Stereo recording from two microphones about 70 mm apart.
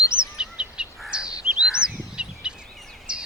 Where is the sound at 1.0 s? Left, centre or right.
Centre.